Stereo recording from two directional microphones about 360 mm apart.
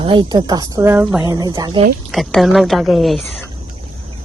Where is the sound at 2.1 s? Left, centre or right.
Centre.